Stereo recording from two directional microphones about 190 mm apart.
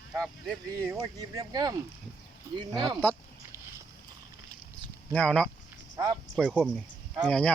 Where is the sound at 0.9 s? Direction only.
20° right (ahead or behind).